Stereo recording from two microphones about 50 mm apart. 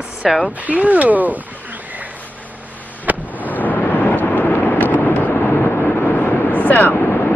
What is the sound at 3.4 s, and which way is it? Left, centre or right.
Vehicle, left.